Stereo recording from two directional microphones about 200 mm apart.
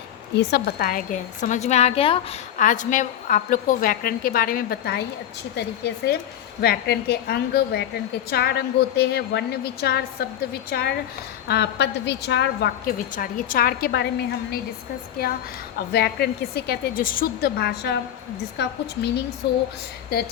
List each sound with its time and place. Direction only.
0.3 s a woman's voice: 50° left (ahead or behind); by 2.2 s 30° left (ahead or behind)
2.6 s a woman's voice: 40° left (ahead or behind); by 12.7 s 60° left (ahead or behind)
13.1 s a woman's voice: 45° left (ahead or behind)
15.9 s a woman's voice: 55° left (ahead or behind)